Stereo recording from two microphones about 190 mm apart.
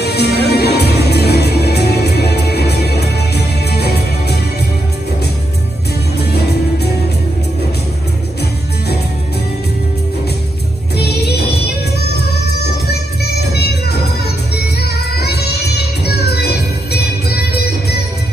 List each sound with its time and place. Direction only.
0.0 s music: 60° left (ahead or behind)
6.1 s music: 60° left (ahead or behind)
11.0 s music: 60° left (ahead or behind)
12.9 s music: 60° left (ahead or behind)